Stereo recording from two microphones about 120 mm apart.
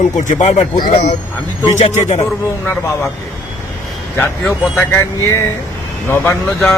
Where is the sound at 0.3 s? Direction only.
80° left; by 1.1 s 65° left (ahead or behind).